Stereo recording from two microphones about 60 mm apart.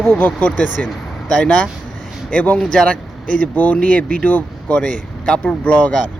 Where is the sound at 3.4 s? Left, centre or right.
Left.